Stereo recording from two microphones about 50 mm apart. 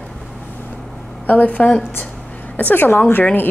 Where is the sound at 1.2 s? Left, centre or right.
Left.